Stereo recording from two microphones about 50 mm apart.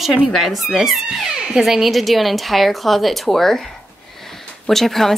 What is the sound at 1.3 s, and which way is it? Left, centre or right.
Speech, centre.